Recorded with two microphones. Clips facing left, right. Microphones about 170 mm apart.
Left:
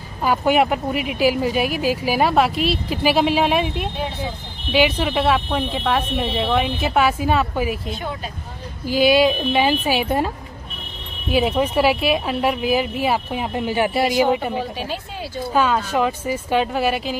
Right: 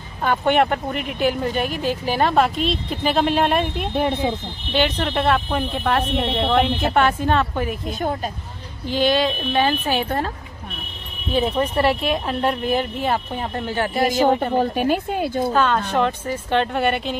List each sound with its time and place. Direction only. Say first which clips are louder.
0.2 s speech: left 1 dB; 5° left (ahead or behind)
3.9 s speech: right 7 dB; 55° right (ahead or behind)
4.7 s speech: left 2 dB; 10° left (ahead or behind)
8.8 s speech: left 4 dB; 10° left (ahead or behind)
14.5 s a woman's voice: right 7 dB; 50° right (ahead or behind)
15.5 s speech: left 4 dB; 10° left (ahead or behind)